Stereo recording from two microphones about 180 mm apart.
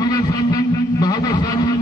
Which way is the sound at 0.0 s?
20° left (ahead or behind).